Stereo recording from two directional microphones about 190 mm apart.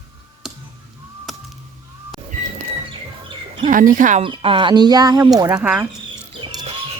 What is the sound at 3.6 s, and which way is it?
Speech, 45° right (ahead or behind).